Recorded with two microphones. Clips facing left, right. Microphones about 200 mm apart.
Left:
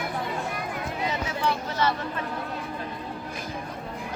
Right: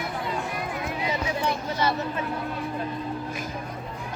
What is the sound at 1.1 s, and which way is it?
Speech, 15° right (ahead or behind).